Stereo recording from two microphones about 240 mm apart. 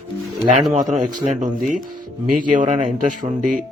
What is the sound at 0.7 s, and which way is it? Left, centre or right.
Speech, right.